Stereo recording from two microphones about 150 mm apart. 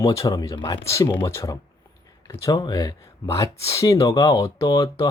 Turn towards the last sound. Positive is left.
turn(degrees=20)  # may be behind; listen again after turning